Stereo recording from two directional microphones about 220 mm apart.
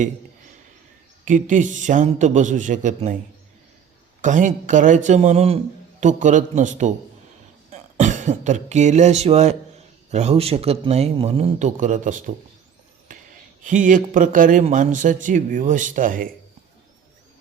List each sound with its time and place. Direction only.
1.2 s speech: 35° right (ahead or behind)
4.2 s a man's voice: 35° right (ahead or behind)
13.1 s a sound: 35° right (ahead or behind)
13.7 s speech: 35° right (ahead or behind)